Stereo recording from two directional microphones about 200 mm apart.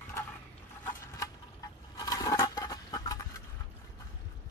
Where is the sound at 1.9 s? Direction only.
20° left (ahead or behind).